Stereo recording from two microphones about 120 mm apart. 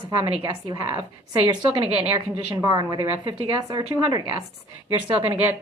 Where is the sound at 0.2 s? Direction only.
30° right (ahead or behind).